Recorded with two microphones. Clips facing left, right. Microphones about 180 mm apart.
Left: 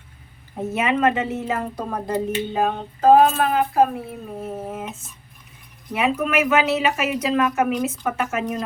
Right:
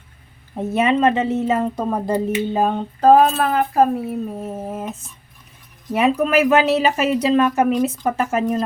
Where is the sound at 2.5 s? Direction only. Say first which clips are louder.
Right 3 dB; 40° right (ahead or behind).